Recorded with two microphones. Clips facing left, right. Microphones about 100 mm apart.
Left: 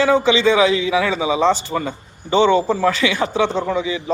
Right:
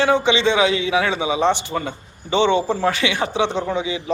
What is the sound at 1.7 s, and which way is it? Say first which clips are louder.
Speech: left 2 dB; 25° left (ahead or behind).